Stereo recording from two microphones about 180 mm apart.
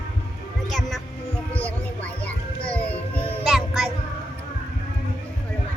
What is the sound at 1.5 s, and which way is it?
Music, 10° left (ahead or behind).